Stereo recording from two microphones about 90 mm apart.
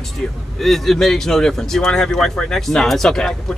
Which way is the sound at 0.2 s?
10° left (ahead or behind).